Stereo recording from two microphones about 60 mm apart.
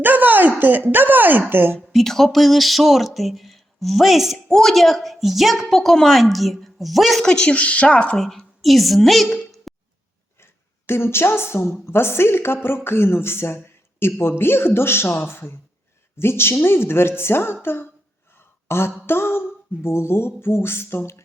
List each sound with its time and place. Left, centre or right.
0.0 s a sound: right
0.9 s speech: right
1.9 s a woman's voice: centre
7.3 s a woman's voice: centre
8.2 s a woman's voice: centre
10.4 s a woman's voice: left
18.3 s a sound: left
19.0 s speech: left